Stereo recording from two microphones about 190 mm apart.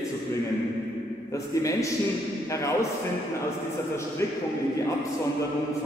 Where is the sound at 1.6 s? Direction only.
15° left (ahead or behind).